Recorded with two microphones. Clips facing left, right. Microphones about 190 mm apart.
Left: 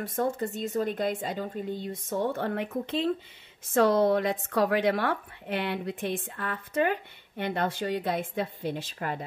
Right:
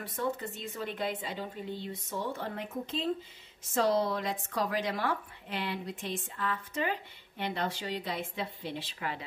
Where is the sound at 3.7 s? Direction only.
55° left (ahead or behind).